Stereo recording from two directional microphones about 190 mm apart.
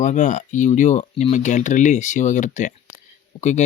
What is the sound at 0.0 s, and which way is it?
Speech, 40° left (ahead or behind).